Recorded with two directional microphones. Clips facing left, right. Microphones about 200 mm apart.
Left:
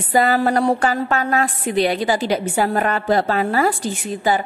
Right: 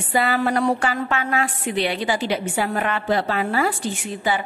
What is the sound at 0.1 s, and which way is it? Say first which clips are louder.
A woman's voice: left 4 dB; 40° left (ahead or behind).